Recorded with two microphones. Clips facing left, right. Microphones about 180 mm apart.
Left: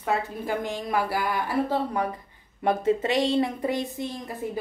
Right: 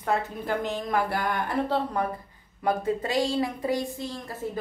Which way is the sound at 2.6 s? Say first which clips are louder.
Left 3 dB; 25° left (ahead or behind).